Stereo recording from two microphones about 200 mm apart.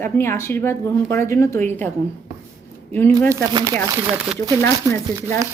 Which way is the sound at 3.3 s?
15° right (ahead or behind).